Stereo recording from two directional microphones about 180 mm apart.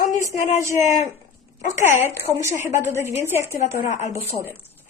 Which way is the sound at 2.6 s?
15° right (ahead or behind).